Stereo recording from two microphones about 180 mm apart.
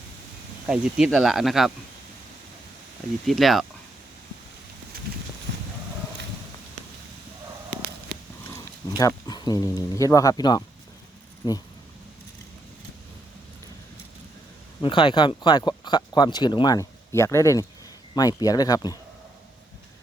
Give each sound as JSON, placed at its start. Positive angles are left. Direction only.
{"t": 0.7, "sound": "speech", "side_deg": -5}
{"t": 3.2, "sound": "speech", "side_deg": 0}
{"t": 9.0, "sound": "speech", "side_deg": 20}
{"t": 14.8, "sound": "speech", "side_deg": 30}